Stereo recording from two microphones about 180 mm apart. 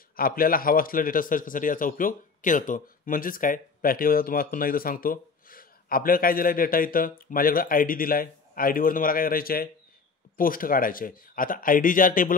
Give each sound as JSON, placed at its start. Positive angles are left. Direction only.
{"t": 0.1, "sound": "a man's voice", "side_deg": 55}